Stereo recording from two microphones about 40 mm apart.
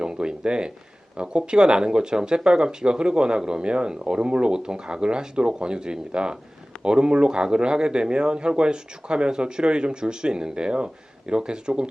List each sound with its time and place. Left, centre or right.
0.0 s speech: right